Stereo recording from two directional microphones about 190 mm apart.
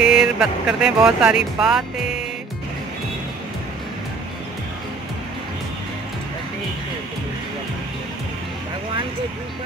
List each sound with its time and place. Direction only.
0.0 s speech: 5° right (ahead or behind)